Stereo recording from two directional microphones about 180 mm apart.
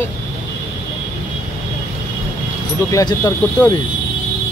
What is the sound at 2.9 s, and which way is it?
Speech, 20° left (ahead or behind).